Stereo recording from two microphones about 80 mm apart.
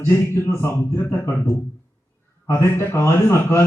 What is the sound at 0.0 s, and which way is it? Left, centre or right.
Mantra, left.